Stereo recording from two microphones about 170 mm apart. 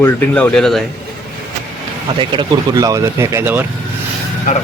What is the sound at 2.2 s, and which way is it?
Speech, 25° right (ahead or behind).